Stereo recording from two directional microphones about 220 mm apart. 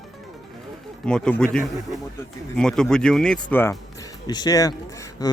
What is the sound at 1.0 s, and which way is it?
Speech, 5° left (ahead or behind).